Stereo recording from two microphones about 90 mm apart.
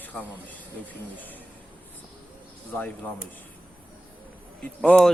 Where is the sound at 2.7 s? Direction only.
15° left (ahead or behind).